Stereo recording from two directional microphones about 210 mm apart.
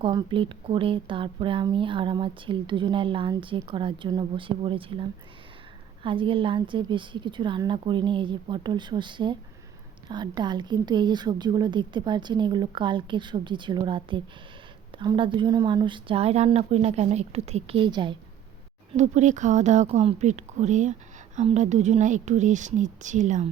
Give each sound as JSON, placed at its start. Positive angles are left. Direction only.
{"t": 0.0, "sound": "a woman's voice", "side_deg": -20}
{"t": 18.9, "sound": "speech", "side_deg": -35}